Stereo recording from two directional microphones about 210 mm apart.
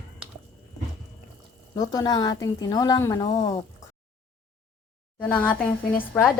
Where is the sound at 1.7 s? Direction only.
15° left (ahead or behind).